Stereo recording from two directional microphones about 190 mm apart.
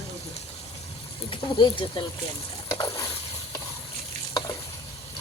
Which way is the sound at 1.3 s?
25° left (ahead or behind).